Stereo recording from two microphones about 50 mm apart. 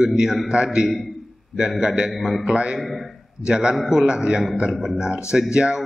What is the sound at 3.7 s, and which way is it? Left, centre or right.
Speech, centre.